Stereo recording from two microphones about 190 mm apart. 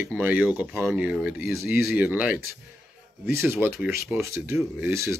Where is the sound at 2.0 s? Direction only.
5° right (ahead or behind).